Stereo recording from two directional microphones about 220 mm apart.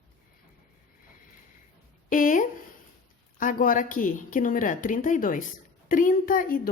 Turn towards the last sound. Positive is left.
turn(degrees=40)  # may be behind; listen again after turning